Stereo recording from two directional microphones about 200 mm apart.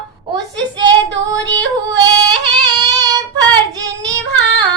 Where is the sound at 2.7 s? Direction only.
20° right (ahead or behind).